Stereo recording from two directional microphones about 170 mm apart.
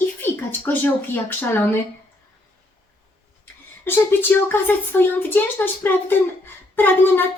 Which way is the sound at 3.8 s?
15° left (ahead or behind).